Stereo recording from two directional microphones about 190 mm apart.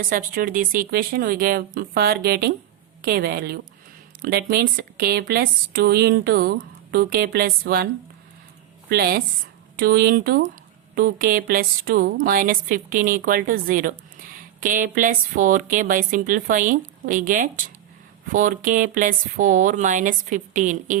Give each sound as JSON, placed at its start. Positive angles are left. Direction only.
{"t": 0.0, "sound": "a woman's voice", "side_deg": -45}
{"t": 8.9, "sound": "a woman's voice", "side_deg": -55}